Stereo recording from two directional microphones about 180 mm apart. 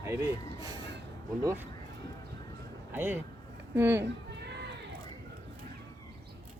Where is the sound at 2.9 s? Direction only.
10° right (ahead or behind).